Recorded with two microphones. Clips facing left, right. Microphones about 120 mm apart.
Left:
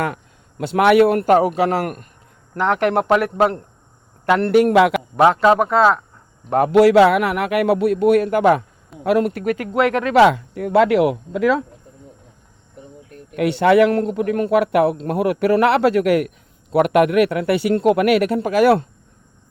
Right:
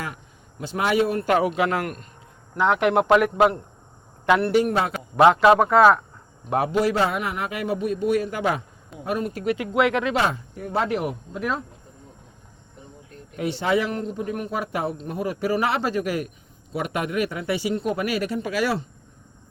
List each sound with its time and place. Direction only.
0.6 s speech: 65° left (ahead or behind)
1.2 s a man's voice: 40° left (ahead or behind)
2.6 s speech: centre (ahead or behind)
4.5 s a man's voice: 90° left
5.2 s speech: 5° right (ahead or behind)
6.7 s speech: 80° left; by 8.6 s 55° left (ahead or behind)
9.0 s speech: 75° left (ahead or behind)
9.4 s speech: 45° left (ahead or behind)
10.2 s speech: 80° left
13.1 s speech: 65° left (ahead or behind)